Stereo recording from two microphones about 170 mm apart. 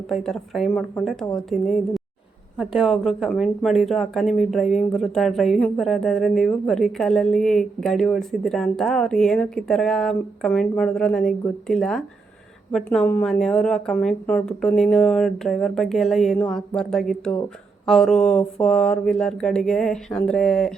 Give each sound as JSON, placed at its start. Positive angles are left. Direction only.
{"t": 0.1, "sound": "speech", "side_deg": 0}